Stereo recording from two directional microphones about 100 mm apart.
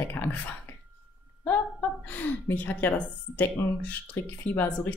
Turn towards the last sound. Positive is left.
turn(degrees=20)  # may be behind; listen again after turning